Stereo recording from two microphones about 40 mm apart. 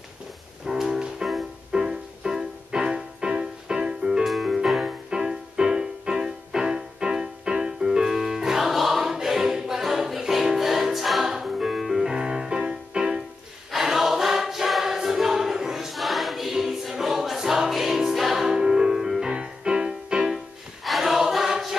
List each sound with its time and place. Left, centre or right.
0.7 s music: centre
4.2 s music: centre
12.1 s music: centre
13.7 s choir: centre
19.3 s music: right
20.8 s choir: centre